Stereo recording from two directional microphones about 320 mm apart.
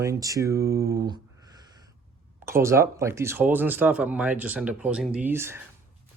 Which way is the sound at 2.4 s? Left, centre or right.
Centre.